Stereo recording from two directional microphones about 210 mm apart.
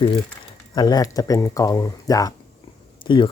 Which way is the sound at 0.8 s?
20° left (ahead or behind).